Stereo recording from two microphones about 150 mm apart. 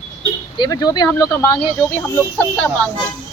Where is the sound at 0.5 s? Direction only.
25° left (ahead or behind).